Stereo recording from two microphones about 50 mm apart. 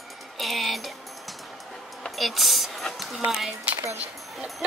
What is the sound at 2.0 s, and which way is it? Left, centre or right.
Speech, centre.